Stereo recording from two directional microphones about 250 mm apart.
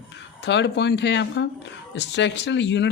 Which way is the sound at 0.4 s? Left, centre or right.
Left.